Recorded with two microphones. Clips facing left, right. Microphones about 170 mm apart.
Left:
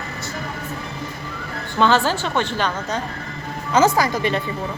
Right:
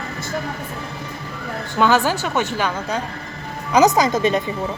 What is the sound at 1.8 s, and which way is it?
Speech, 10° right (ahead or behind).